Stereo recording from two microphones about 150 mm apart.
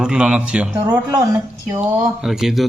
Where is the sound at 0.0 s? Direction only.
5° right (ahead or behind).